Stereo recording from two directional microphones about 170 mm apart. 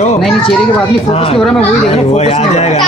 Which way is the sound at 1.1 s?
35° left (ahead or behind).